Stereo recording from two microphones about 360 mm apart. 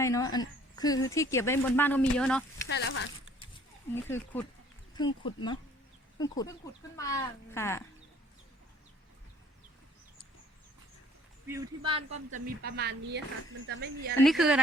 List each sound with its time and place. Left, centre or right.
0.0 s speech: centre
2.6 s speech: left
3.9 s speech: centre
11.4 s speech: centre; by 14.2 s right
14.2 s speech: centre